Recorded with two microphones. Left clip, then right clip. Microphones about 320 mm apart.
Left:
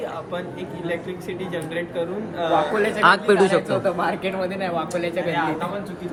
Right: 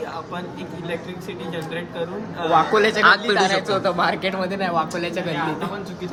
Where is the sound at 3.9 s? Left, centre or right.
Right.